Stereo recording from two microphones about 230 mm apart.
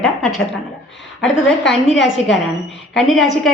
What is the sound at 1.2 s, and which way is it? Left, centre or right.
Speech, left.